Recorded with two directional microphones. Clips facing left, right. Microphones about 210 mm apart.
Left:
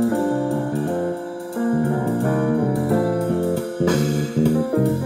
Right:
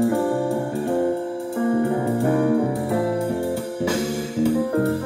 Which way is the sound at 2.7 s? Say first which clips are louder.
Left 3 dB; centre (ahead or behind).